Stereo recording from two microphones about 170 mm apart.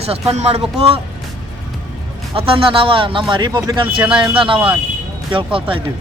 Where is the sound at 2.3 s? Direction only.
30° right (ahead or behind).